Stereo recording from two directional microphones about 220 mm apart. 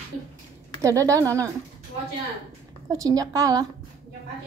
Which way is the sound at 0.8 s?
15° right (ahead or behind).